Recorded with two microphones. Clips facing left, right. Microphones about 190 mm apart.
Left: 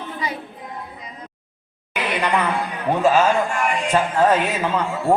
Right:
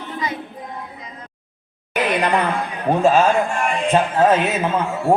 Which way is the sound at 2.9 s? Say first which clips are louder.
Right 2 dB; 25° right (ahead or behind).